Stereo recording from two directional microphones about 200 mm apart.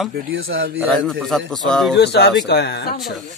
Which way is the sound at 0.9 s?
Centre (ahead or behind).